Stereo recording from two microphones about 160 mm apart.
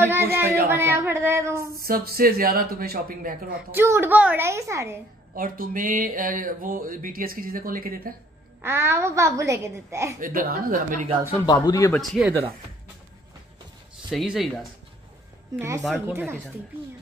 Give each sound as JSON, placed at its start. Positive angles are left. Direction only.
{"t": 0.0, "sound": "a sound", "side_deg": -15}
{"t": 0.7, "sound": "a woman's voice", "side_deg": -15}
{"t": 1.8, "sound": "speech", "side_deg": -70}
{"t": 3.7, "sound": "a woman's voice", "side_deg": -15}
{"t": 5.3, "sound": "speech", "side_deg": -60}
{"t": 8.5, "sound": "a woman's voice", "side_deg": -15}
{"t": 10.2, "sound": "speech", "side_deg": -60}
{"t": 11.4, "sound": "speech", "side_deg": 20}
{"t": 11.9, "sound": "speech", "side_deg": 0}
{"t": 14.1, "sound": "speech", "side_deg": 0}
{"t": 16.1, "sound": "a woman's voice", "side_deg": -15}